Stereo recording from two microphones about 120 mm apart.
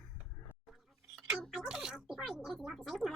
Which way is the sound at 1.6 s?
5° right (ahead or behind).